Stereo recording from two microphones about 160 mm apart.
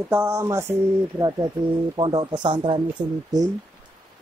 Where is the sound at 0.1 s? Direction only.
15° right (ahead or behind).